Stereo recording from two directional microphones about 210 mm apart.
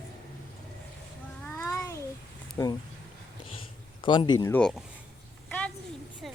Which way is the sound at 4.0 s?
20° left (ahead or behind).